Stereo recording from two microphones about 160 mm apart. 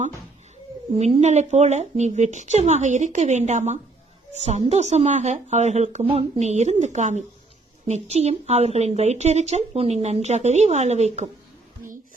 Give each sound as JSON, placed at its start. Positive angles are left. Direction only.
{"t": 0.9, "sound": "speech", "side_deg": -40}